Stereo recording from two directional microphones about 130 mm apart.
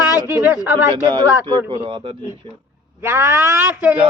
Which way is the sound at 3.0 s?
20° right (ahead or behind).